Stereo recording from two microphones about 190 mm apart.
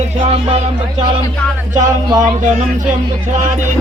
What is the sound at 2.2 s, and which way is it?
Speech, 40° right (ahead or behind).